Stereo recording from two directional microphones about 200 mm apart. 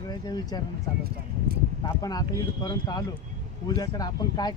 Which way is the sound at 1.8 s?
20° left (ahead or behind).